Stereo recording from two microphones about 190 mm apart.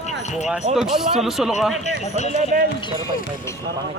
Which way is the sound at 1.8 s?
35° left (ahead or behind).